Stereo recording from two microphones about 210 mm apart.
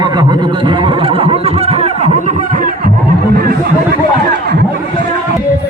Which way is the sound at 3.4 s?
45° right (ahead or behind).